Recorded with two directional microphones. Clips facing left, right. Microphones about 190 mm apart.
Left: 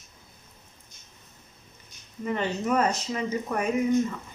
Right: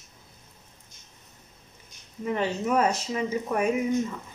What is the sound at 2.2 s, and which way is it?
Speech, 5° right (ahead or behind).